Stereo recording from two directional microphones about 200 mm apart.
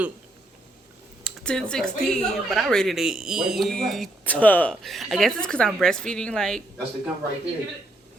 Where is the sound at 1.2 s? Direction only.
5° left (ahead or behind).